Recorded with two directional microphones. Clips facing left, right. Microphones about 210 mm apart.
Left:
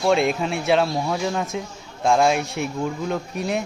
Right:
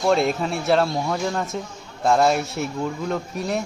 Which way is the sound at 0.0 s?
Centre (ahead or behind).